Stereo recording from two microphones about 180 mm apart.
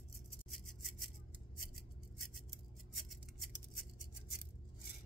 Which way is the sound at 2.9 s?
Centre (ahead or behind).